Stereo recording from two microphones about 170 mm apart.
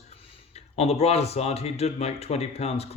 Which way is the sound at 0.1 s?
35° left (ahead or behind).